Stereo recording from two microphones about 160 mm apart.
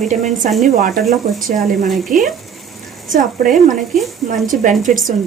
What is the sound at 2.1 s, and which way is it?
Speech, 55° right (ahead or behind).